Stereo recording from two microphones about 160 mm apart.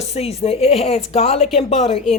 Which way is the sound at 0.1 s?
40° left (ahead or behind).